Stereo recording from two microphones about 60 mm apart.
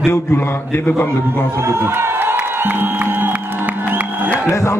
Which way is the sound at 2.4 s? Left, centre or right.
Right.